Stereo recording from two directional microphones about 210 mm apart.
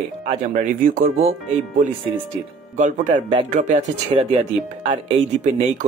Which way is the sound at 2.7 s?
35° right (ahead or behind).